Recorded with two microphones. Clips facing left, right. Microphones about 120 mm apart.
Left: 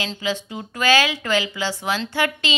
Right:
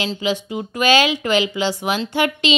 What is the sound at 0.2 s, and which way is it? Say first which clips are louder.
Speech: right 4 dB; 15° right (ahead or behind).